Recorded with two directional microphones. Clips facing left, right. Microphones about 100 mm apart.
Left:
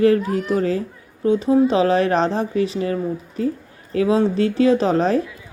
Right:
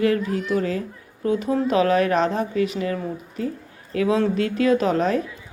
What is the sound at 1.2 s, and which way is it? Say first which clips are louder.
A woman's voice: left 6 dB; 25° left (ahead or behind).